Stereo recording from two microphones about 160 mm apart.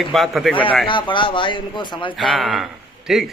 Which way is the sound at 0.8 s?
30° left (ahead or behind).